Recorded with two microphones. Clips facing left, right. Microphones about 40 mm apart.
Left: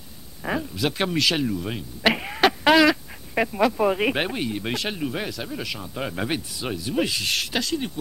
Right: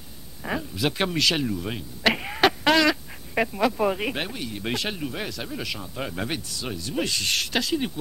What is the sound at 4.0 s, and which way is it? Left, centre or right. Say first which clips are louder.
Speech: left 5 dB; centre.